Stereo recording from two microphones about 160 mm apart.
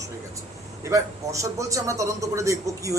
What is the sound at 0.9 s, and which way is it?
A man's voice, 20° right (ahead or behind).